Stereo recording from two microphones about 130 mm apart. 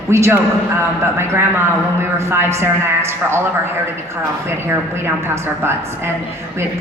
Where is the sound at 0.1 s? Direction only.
20° right (ahead or behind).